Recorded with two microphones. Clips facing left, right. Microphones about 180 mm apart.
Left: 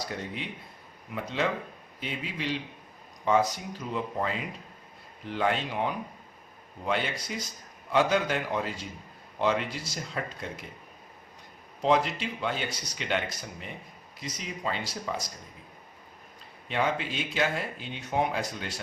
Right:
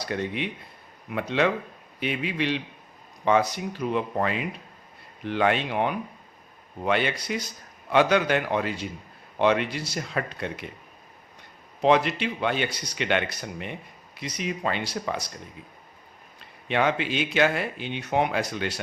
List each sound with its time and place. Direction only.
0.0 s speech: 75° right (ahead or behind)
11.8 s speech: 70° right (ahead or behind)
16.6 s speech: 75° right (ahead or behind)